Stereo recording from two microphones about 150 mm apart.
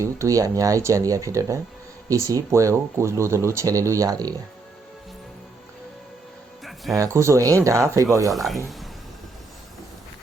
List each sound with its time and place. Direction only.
0.0 s speech: 20° right (ahead or behind)
6.9 s speech: 20° right (ahead or behind)
8.3 s speech: centre (ahead or behind)